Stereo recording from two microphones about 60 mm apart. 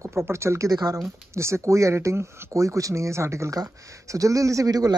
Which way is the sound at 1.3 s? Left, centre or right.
Right.